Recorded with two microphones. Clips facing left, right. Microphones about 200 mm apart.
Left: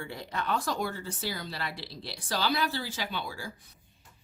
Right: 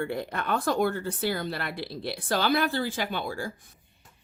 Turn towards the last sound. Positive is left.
turn(degrees=-50)  # may be behind; listen again after turning